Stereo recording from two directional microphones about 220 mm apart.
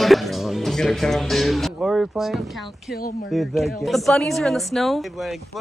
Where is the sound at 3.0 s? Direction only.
45° left (ahead or behind).